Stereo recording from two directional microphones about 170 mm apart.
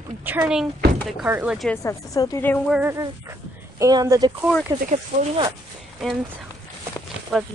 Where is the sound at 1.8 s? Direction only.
20° left (ahead or behind).